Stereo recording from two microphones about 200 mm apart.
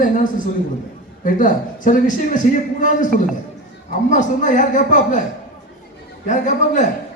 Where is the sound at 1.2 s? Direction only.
40° left (ahead or behind).